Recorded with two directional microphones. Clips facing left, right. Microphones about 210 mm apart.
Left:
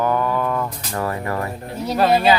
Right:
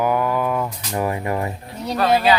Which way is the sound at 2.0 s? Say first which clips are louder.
Left 1 dB; 25° left (ahead or behind).